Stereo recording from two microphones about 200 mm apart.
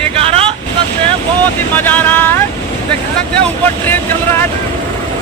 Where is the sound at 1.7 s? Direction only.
10° left (ahead or behind).